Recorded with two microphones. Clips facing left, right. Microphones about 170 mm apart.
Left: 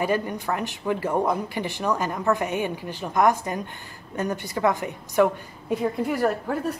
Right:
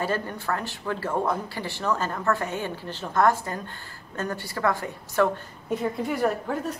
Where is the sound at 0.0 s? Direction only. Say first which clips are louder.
Left 3 dB; 15° left (ahead or behind).